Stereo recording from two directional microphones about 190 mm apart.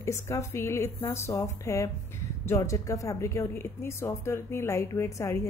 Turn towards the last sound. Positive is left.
turn(degrees=15)  # may be behind; listen again after turning